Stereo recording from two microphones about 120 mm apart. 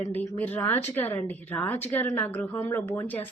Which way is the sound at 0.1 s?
15° left (ahead or behind).